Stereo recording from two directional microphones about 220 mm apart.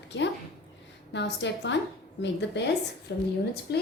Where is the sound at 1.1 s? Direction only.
55° left (ahead or behind).